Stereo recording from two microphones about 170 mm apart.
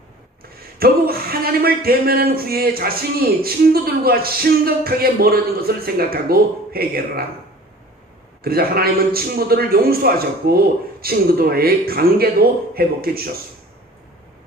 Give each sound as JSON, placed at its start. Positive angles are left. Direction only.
{"t": 0.8, "sound": "speech", "side_deg": -65}
{"t": 8.4, "sound": "speech", "side_deg": -65}